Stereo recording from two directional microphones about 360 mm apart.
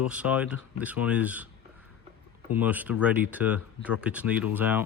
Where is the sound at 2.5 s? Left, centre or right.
Centre.